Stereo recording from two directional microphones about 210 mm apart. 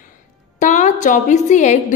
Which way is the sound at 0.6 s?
35° left (ahead or behind).